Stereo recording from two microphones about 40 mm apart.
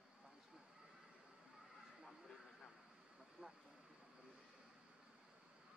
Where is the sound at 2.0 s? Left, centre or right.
Centre.